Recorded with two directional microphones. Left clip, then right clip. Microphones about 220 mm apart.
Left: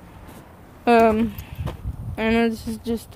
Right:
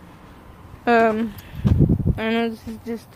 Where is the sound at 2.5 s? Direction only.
25° left (ahead or behind).